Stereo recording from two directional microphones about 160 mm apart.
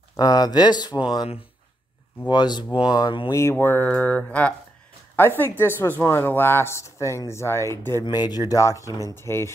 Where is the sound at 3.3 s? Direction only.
15° left (ahead or behind).